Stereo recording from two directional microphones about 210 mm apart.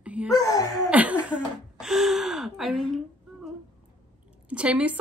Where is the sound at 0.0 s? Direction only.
5° right (ahead or behind).